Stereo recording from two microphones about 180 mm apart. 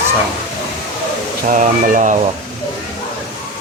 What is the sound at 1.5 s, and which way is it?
Speech, 45° right (ahead or behind).